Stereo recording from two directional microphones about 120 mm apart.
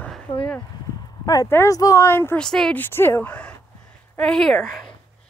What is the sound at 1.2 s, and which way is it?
Speech, 30° left (ahead or behind).